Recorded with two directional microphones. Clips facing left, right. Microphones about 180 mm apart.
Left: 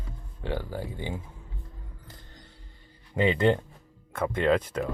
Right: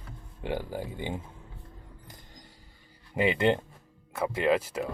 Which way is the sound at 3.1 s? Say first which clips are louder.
Left 2 dB; 10° right (ahead or behind).